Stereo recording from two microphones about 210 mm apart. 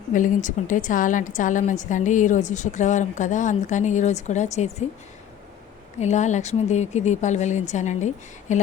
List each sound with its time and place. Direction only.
0.1 s a woman's voice: 40° left (ahead or behind)
6.0 s a woman's voice: 35° left (ahead or behind)